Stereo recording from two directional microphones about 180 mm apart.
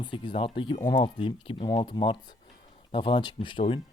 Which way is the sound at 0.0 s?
25° left (ahead or behind).